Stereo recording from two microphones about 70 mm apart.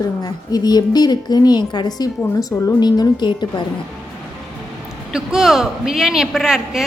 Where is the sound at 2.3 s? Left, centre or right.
Left.